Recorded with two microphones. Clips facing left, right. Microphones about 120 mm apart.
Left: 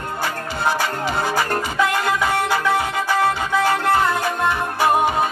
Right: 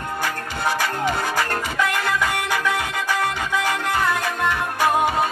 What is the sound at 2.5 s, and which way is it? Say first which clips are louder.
Music: left 4 dB; 15° left (ahead or behind).